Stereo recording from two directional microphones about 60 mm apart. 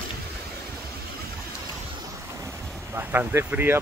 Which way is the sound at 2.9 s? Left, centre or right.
Right.